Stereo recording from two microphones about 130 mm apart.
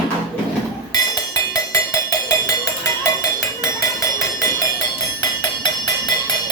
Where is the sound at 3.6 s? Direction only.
25° left (ahead or behind).